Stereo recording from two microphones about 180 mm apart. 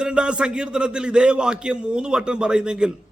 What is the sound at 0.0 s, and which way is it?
A man's voice, 5° right (ahead or behind).